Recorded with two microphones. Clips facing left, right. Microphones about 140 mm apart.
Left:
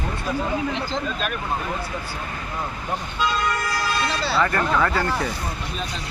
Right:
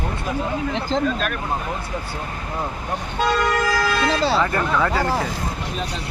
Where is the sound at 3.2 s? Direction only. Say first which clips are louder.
Right 5 dB; 80° right.